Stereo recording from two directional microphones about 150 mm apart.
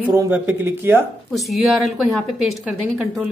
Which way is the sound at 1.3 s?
Centre (ahead or behind).